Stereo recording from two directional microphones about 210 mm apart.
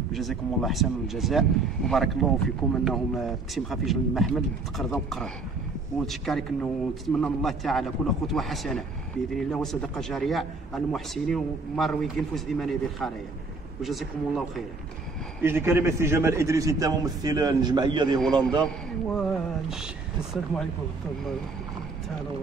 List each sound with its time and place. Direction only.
0.1 s a man's voice: centre (ahead or behind)
15.4 s a man's voice: 10° right (ahead or behind)
18.2 s a man's voice: 5° left (ahead or behind)